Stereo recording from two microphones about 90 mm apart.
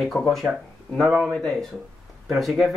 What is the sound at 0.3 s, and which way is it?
A man's voice, centre (ahead or behind).